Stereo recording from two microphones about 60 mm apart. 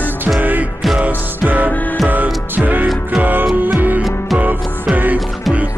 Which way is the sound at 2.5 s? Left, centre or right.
Right.